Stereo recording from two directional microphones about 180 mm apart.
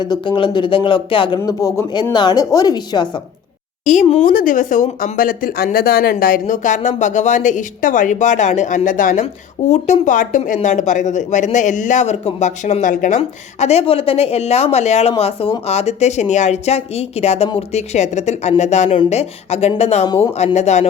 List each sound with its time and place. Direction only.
0.0 s speech: 25° left (ahead or behind)
3.8 s speech: 40° left (ahead or behind)
4.3 s speech: 50° left (ahead or behind)